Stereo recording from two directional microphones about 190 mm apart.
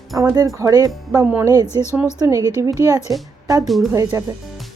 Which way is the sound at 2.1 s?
15° right (ahead or behind).